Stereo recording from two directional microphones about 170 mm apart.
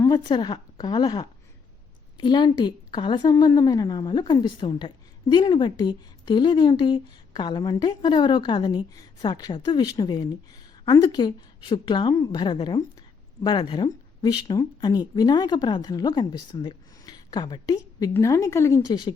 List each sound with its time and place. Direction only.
0.0 s speech: 25° left (ahead or behind)